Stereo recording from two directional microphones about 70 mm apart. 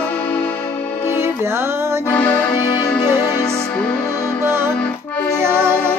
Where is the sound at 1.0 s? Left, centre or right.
Right.